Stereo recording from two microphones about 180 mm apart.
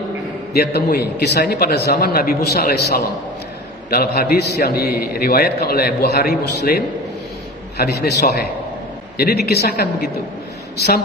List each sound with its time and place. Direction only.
0.5 s a man's voice: 60° left (ahead or behind)